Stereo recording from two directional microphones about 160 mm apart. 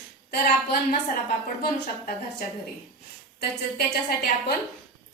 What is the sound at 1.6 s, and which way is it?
Speech, 70° left (ahead or behind).